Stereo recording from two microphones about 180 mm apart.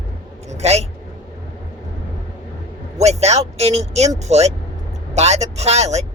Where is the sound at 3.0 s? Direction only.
35° right (ahead or behind).